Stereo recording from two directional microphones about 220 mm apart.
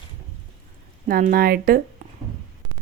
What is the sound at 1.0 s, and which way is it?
Speech, 40° right (ahead or behind).